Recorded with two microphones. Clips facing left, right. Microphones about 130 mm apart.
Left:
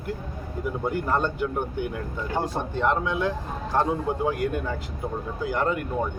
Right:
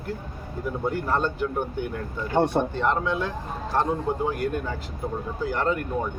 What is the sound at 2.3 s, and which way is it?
Speech, 80° right.